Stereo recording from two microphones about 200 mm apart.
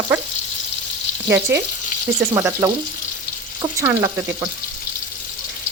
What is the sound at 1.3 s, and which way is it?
Speech, 10° right (ahead or behind).